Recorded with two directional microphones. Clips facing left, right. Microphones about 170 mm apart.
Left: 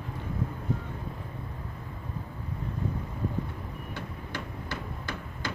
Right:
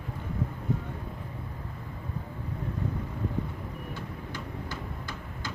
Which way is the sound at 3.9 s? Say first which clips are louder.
Even; 70° left (ahead or behind).